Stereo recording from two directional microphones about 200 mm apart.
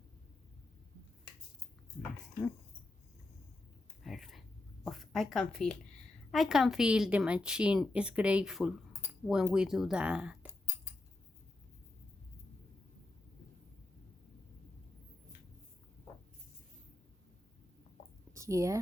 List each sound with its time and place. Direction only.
4.0 s a sound: centre (ahead or behind)
6.3 s a woman's voice: centre (ahead or behind)
18.3 s speech: 15° right (ahead or behind)